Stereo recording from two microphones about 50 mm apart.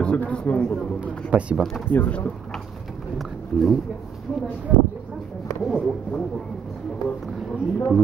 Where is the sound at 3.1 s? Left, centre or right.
Centre.